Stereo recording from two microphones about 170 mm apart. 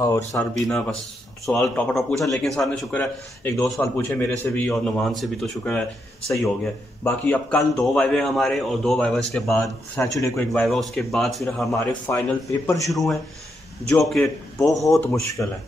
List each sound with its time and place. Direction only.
0.0 s a man's voice: 15° left (ahead or behind)
0.6 s a man's voice: 5° left (ahead or behind)
7.0 s a man's voice: 10° left (ahead or behind)
10.1 s a man's voice: 20° left (ahead or behind)
10.5 s a man's voice: 5° left (ahead or behind)
11.7 s a man's voice: 15° left (ahead or behind)
12.8 s a man's voice: centre (ahead or behind)